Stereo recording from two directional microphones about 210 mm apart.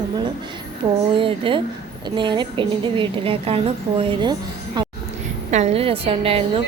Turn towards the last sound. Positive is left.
turn(degrees=-25)  # may be behind; listen again after turning